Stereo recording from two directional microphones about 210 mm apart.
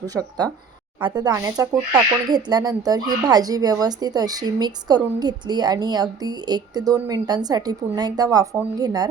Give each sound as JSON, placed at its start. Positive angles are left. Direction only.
{"t": 0.0, "sound": "speech", "side_deg": -15}